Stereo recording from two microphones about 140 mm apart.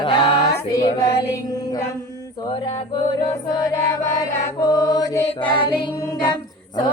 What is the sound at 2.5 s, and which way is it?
Mantra, 40° left (ahead or behind).